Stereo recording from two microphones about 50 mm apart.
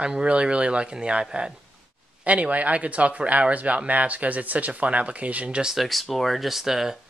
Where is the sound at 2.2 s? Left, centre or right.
Right.